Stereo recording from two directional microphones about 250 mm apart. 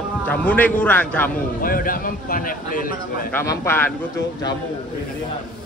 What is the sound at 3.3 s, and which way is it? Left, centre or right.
Speech, centre.